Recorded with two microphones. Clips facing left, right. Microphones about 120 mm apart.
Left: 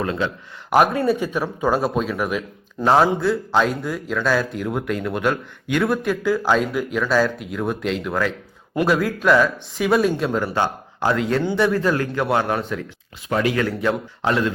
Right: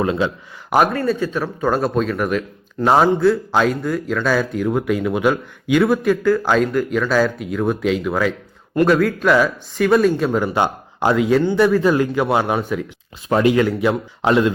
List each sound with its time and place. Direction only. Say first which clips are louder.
0.0 s speech: right 4 dB; 15° right (ahead or behind)
0.9 s speech: even; 15° left (ahead or behind); by 8.3 s 5° right (ahead or behind)
8.7 s speech: right 4 dB; 5° left (ahead or behind)
11.8 s speech: right 4 dB; 15° right (ahead or behind)
13.2 s speech: right 5 dB; 25° right (ahead or behind)